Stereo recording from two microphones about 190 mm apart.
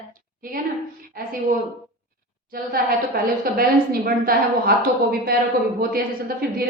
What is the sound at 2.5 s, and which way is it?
A woman's voice, 50° right (ahead or behind).